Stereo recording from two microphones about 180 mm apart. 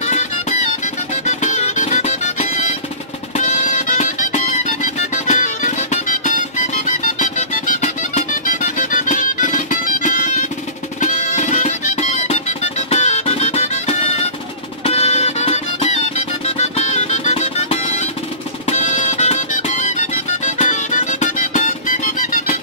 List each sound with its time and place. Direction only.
0.0 s music: 40° left (ahead or behind)